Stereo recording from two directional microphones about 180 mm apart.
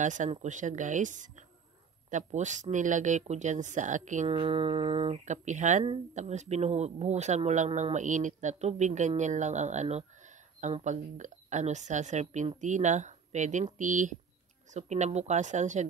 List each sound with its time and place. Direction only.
0.0 s speech: 45° right (ahead or behind)
4.4 s speech: 30° right (ahead or behind)